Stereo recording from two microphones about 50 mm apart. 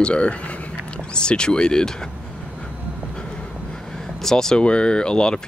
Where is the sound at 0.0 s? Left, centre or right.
Left.